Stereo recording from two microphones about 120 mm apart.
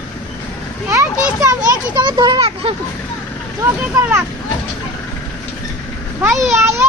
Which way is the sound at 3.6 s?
20° right (ahead or behind).